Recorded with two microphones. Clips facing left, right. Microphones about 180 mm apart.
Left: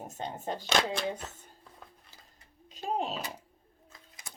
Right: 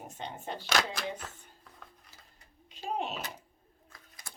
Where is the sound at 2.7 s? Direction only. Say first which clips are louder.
Left 2 dB; 40° left (ahead or behind).